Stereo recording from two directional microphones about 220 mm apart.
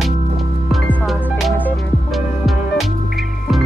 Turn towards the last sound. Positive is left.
turn(degrees=0)  # may be behind; listen again after turning